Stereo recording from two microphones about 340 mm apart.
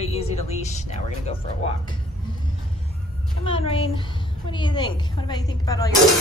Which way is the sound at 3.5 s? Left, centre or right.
Centre.